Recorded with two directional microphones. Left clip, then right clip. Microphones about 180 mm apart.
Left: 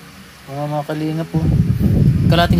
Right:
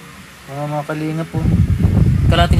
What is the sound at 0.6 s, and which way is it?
Speech, 5° left (ahead or behind).